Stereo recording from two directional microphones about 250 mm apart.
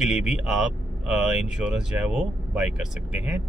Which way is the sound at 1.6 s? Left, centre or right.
Centre.